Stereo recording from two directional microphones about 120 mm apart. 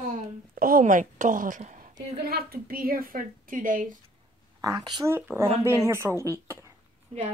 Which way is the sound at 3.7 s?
90° right.